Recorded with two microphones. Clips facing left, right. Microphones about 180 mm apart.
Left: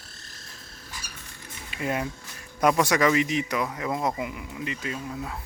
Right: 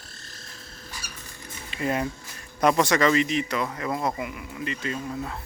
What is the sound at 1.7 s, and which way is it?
Speech, 5° left (ahead or behind).